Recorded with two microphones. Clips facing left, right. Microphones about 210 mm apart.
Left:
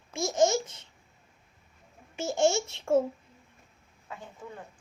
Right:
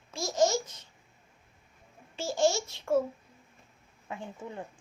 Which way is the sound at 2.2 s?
20° left (ahead or behind).